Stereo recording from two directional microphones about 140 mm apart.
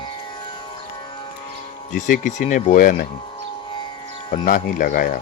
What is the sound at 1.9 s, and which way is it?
Speech, 70° left (ahead or behind).